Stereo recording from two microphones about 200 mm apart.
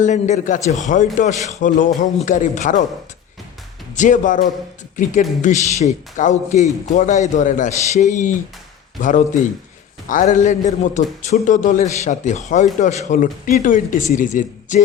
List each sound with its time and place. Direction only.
0.0 s a man's voice: 35° left (ahead or behind)
3.9 s a man's voice: 40° left (ahead or behind)